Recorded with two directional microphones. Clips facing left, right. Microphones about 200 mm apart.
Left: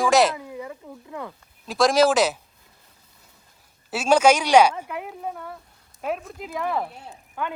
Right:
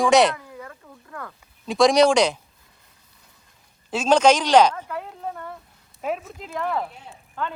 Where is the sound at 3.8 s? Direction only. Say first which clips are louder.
Right 1 dB; 10° left (ahead or behind).